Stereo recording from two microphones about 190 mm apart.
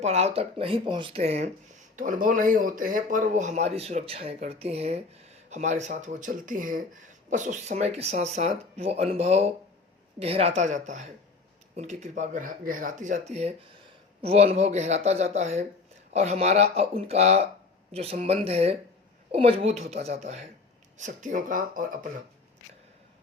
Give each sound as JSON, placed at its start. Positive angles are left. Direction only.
{"t": 0.0, "sound": "speech", "side_deg": -35}